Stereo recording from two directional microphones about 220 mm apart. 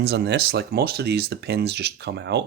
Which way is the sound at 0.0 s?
50° right (ahead or behind).